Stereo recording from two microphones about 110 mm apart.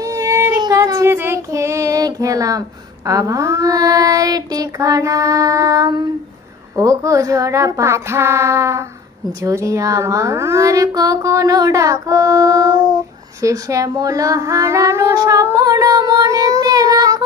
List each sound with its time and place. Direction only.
0.0 s female singing: 30° right (ahead or behind)
0.6 s child singing: 35° right (ahead or behind)
6.8 s speech: 30° right (ahead or behind)
15.4 s child singing: 30° right (ahead or behind)